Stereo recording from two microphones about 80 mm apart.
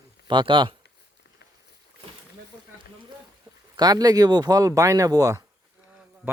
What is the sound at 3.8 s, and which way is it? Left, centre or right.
Speech, right.